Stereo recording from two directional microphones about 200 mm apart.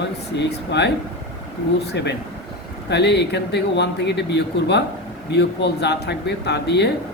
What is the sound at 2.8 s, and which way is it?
Speech, 55° left (ahead or behind).